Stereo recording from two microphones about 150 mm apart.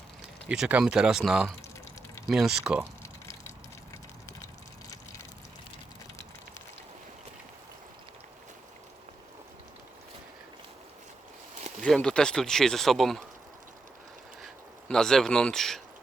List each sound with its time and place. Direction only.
0.4 s speech: 5° right (ahead or behind)
3.0 s a sound: 20° left (ahead or behind)
11.8 s speech: 5° left (ahead or behind)
14.4 s speech: 5° left (ahead or behind)